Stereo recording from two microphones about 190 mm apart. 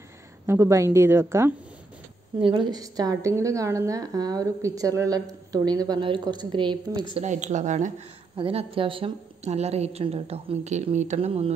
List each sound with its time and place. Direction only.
0.5 s a woman's voice: 15° right (ahead or behind)
2.4 s a woman's voice: 25° right (ahead or behind)
7.2 s a woman's voice: 40° right (ahead or behind)